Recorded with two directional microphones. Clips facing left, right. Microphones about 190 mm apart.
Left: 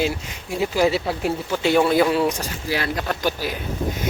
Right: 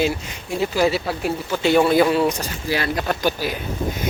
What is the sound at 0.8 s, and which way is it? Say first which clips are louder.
Speech: left 1 dB; 20° left (ahead or behind).